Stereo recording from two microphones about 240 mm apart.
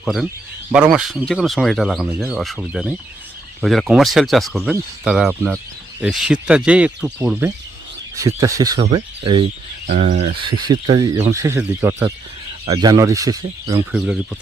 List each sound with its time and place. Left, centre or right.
0.0 s speech: centre
13.9 s speech: centre